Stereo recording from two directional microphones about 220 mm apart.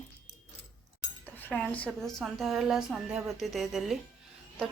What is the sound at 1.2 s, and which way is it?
A woman's voice, 10° left (ahead or behind).